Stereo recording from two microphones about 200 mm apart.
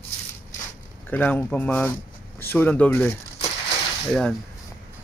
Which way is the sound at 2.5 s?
10° left (ahead or behind).